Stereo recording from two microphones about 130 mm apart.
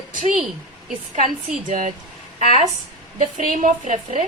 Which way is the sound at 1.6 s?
90° right.